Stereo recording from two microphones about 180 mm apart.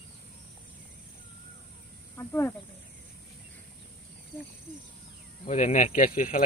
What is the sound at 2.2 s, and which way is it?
Speech, 10° left (ahead or behind).